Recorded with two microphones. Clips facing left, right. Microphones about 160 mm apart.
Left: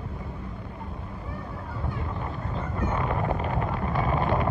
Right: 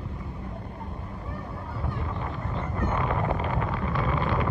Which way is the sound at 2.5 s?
10° left (ahead or behind).